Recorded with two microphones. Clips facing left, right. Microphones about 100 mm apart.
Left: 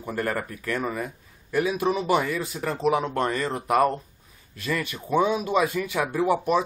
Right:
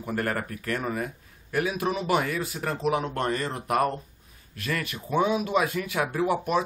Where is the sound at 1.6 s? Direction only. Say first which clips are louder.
Left 3 dB; centre (ahead or behind).